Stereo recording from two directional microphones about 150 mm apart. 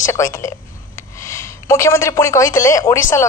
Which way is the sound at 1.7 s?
20° left (ahead or behind).